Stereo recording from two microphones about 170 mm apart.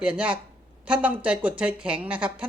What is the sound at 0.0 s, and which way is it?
Speech, 5° right (ahead or behind).